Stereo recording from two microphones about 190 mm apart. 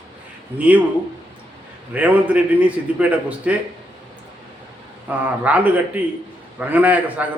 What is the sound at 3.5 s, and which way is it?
Speech, 5° right (ahead or behind).